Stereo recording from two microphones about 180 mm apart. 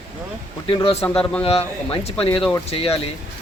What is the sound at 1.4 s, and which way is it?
Speech, 35° left (ahead or behind).